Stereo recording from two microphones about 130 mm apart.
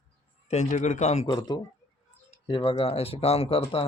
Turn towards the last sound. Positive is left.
turn(degrees=45)  # may be behind; listen again after turning